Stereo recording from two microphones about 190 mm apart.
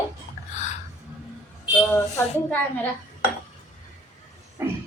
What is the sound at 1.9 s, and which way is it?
Speech, 15° left (ahead or behind).